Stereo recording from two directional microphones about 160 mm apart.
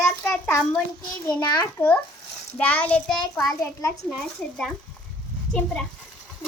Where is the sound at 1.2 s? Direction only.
20° left (ahead or behind).